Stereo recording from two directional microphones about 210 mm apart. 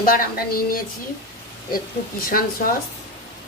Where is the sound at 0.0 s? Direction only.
45° left (ahead or behind).